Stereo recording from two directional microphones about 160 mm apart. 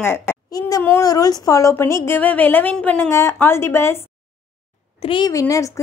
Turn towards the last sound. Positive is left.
turn(degrees=20)  # may be behind; listen again after turning